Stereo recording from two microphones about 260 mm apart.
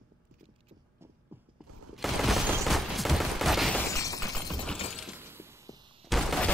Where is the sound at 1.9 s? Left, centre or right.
Centre.